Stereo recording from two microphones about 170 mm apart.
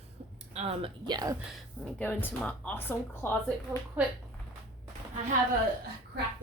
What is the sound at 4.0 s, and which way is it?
Speech, 10° right (ahead or behind).